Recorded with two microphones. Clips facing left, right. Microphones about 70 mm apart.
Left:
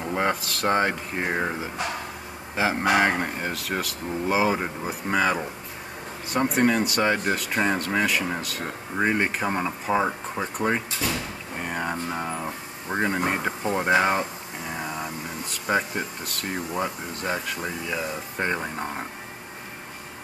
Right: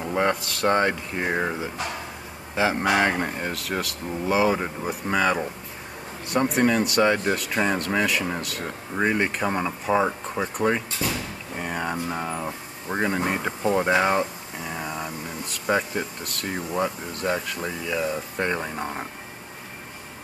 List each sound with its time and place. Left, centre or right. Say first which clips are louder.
0.0 s speech: right 2 dB; centre
9.0 s speech: even; centre
9.4 s speech: right 1 dB; centre
11.1 s music: even; centre
13.7 s speech: even; centre
14.7 s vehicle: even; centre
15.6 s speech: right 1 dB; centre